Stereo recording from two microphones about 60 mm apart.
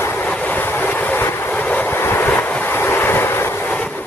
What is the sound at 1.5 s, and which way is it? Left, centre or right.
Vehicle, left.